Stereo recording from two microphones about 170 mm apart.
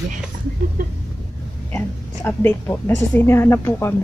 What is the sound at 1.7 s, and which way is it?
A woman's voice, 10° left (ahead or behind).